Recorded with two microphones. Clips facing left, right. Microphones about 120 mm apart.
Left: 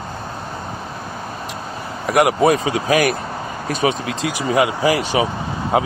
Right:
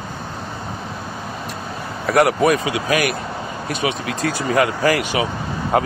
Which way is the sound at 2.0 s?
20° left (ahead or behind).